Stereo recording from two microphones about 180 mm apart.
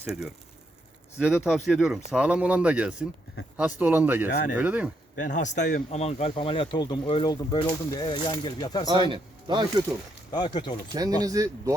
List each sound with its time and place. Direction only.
0.1 s speech: centre (ahead or behind)
1.5 s speech: centre (ahead or behind)
5.1 s speech: 45° left (ahead or behind); by 8.8 s 25° left (ahead or behind)
8.9 s speech: 25° right (ahead or behind)
10.3 s speech: 25° left (ahead or behind)
10.9 s speech: 20° right (ahead or behind)